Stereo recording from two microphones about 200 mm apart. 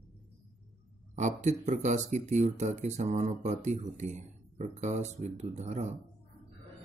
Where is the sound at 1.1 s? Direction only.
35° right (ahead or behind).